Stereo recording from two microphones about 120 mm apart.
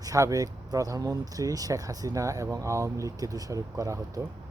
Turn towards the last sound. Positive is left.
turn(degrees=-25)  # may be behind; listen again after turning